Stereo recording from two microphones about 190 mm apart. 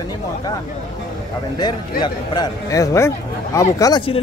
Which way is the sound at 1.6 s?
20° left (ahead or behind).